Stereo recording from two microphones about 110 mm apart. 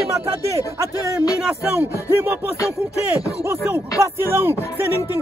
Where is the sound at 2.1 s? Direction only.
20° right (ahead or behind).